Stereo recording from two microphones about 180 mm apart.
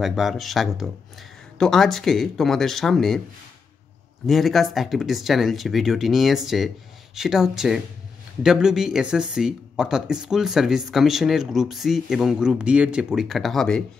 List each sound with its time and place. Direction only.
0.0 s speech: centre (ahead or behind)
4.3 s speech: centre (ahead or behind)